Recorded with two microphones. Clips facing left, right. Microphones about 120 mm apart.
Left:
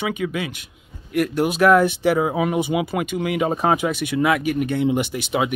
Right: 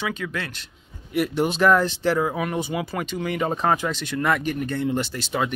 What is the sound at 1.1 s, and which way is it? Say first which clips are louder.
Speech: left 2 dB; centre (ahead or behind).